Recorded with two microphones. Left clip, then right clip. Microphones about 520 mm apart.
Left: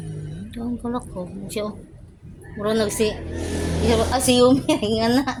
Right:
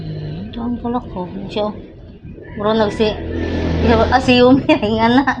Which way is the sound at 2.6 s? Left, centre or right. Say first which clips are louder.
Right 6 dB; left.